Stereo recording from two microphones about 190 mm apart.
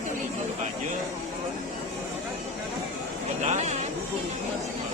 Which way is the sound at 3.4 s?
35° right (ahead or behind).